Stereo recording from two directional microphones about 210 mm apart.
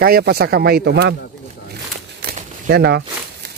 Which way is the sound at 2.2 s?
50° right (ahead or behind).